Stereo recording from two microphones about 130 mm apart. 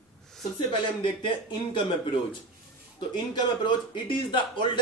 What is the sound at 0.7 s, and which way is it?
Speech, 40° left (ahead or behind).